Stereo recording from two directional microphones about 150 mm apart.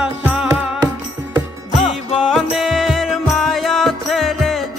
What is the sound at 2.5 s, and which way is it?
Music, centre (ahead or behind).